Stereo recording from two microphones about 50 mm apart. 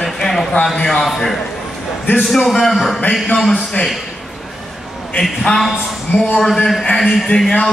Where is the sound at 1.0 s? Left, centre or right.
Centre.